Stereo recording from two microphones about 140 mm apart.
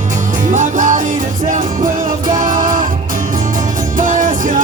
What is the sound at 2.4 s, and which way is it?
Music, 70° right (ahead or behind).